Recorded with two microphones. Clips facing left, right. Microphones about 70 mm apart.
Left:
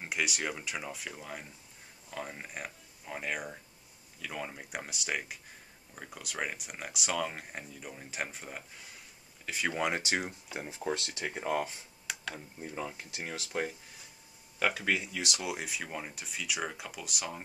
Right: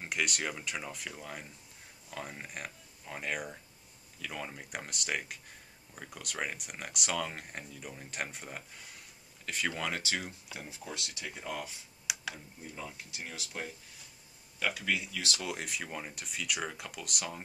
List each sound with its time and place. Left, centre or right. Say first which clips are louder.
0.0 s speech: left 1 dB; centre
9.8 s speech: left 4 dB; left
12.1 s tick-tock: even; centre
12.7 s speech: left 5 dB; left
14.9 s speech: left 2 dB; left
15.3 s speech: left 1 dB; centre